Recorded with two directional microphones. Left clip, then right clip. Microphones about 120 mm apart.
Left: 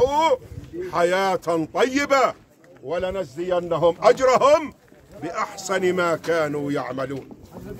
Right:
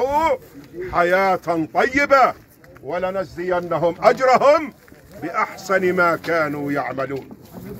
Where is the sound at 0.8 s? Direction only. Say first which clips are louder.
Right 4 dB; 35° left (ahead or behind).